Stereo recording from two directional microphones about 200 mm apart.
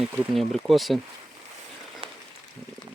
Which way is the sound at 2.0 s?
25° right (ahead or behind).